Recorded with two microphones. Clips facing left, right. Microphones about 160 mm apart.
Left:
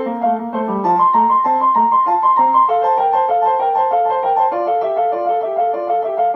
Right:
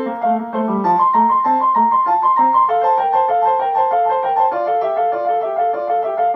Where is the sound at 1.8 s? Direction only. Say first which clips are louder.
Left 1 dB; centre (ahead or behind).